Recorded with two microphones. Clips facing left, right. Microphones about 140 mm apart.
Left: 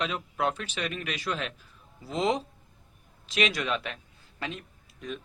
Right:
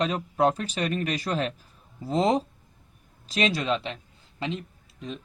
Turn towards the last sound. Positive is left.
turn(degrees=-25)  # may be behind; listen again after turning